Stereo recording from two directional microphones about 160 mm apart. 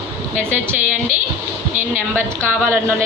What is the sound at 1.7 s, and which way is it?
Speech, 50° right (ahead or behind).